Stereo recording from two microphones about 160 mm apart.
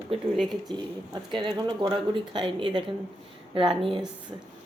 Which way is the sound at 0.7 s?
25° right (ahead or behind).